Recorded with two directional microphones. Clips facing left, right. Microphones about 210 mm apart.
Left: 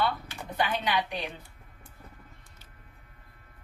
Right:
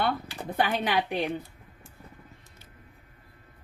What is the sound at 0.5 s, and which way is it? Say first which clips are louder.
Speech: right 3 dB; 50° right (ahead or behind).